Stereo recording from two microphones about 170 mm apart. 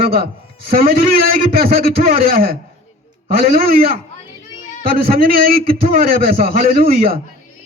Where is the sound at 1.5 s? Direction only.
60° right (ahead or behind).